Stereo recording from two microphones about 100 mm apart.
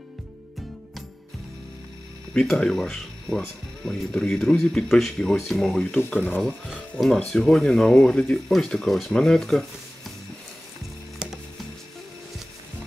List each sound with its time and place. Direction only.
2.3 s speech: 5° left (ahead or behind)
6.1 s speech: 20° left (ahead or behind)
7.2 s speech: 5° left (ahead or behind)